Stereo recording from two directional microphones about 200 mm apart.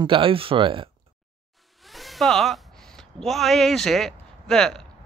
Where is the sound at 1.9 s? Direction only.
Centre (ahead or behind).